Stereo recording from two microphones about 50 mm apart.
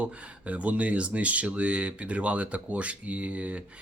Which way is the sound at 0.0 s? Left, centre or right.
Right.